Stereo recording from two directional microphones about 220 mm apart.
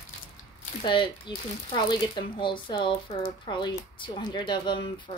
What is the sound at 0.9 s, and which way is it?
Speech, 20° left (ahead or behind).